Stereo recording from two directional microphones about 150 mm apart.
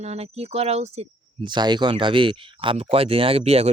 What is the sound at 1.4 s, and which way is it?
Speech, 30° right (ahead or behind).